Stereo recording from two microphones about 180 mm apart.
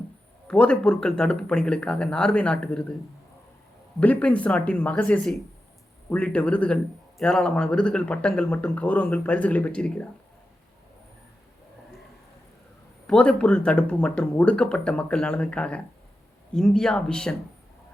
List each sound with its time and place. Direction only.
0.4 s speech: 5° left (ahead or behind)
4.0 s speech: 10° left (ahead or behind)
13.1 s speech: 5° left (ahead or behind)